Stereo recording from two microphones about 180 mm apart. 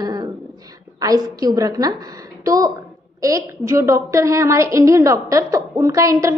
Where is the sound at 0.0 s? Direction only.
25° right (ahead or behind).